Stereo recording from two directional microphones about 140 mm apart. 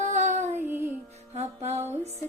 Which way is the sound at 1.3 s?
50° right (ahead or behind).